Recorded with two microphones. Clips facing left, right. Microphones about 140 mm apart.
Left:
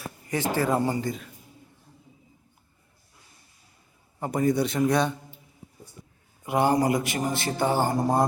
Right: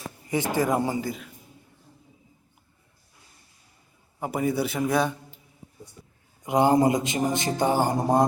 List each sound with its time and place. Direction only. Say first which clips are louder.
0.5 s speech: even; 15° right (ahead or behind)
4.2 s a man's voice: left 2 dB; 5° right (ahead or behind)
6.4 s a man's voice: right 3 dB; 20° right (ahead or behind)